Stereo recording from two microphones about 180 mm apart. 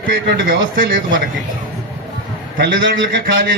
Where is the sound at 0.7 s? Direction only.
50° right (ahead or behind).